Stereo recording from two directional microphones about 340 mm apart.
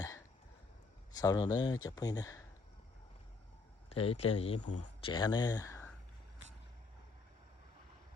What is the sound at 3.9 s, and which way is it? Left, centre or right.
Speech, centre.